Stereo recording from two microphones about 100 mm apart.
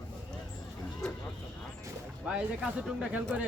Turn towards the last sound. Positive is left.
turn(degrees=-5)  # may be behind; listen again after turning